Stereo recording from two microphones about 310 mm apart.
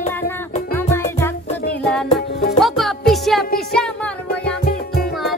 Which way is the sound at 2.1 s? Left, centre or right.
Left.